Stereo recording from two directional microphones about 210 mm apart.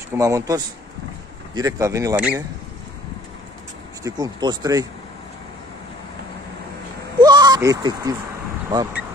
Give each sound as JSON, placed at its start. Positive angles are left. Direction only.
{"t": 0.2, "sound": "speech", "side_deg": -15}
{"t": 4.0, "sound": "speech", "side_deg": -20}
{"t": 7.2, "sound": "bleat", "side_deg": -20}
{"t": 8.6, "sound": "speech", "side_deg": -15}